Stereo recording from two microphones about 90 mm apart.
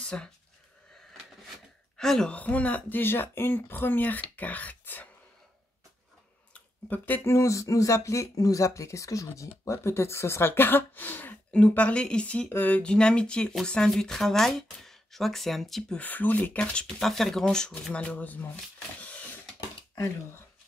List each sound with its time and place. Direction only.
0.0 s speech: 10° left (ahead or behind)
2.0 s speech: 5° left (ahead or behind)
2.3 s speech: 15° left (ahead or behind)
6.5 s a sound: 20° left (ahead or behind)
7.3 s speech: 35° left (ahead or behind); by 16.0 s centre (ahead or behind)
16.0 s speech: 20° left (ahead or behind)